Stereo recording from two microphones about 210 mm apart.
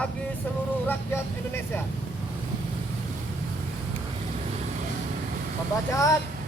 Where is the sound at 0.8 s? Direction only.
10° left (ahead or behind).